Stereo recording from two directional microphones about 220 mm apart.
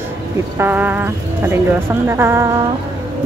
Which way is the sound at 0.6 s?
10° right (ahead or behind).